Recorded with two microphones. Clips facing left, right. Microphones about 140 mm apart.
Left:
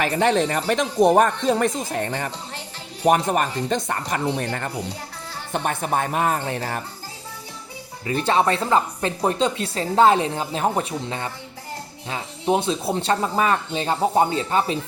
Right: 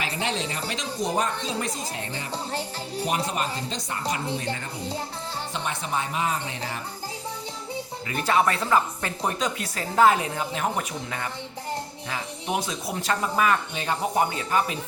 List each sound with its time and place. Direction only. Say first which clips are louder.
0.0 s speech: left 9 dB; 55° left (ahead or behind)
2.3 s music: right 5 dB; 35° right (ahead or behind)
3.1 s a woman's voice: left 10 dB; 55° left (ahead or behind)
8.0 s speech: left 3 dB; 30° left (ahead or behind)